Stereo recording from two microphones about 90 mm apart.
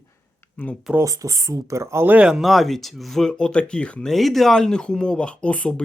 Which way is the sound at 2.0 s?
10° right (ahead or behind).